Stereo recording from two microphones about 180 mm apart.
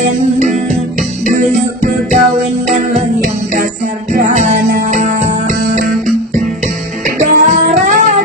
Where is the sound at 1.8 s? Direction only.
45° right (ahead or behind).